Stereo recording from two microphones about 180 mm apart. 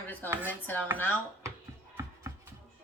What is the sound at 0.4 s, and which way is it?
Speech, 10° left (ahead or behind).